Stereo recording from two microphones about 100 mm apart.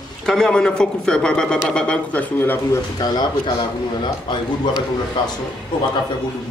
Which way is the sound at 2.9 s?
45° left (ahead or behind).